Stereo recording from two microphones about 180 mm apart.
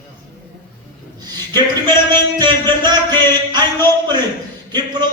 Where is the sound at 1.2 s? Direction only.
25° right (ahead or behind).